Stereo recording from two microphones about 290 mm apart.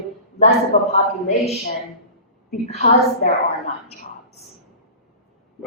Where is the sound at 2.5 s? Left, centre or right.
Left.